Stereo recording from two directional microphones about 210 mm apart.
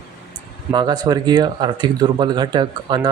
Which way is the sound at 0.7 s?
20° right (ahead or behind).